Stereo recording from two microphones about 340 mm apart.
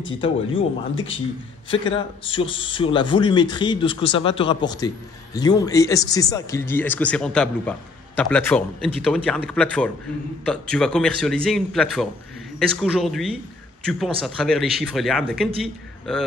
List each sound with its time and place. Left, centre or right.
0.2 s a man's voice: centre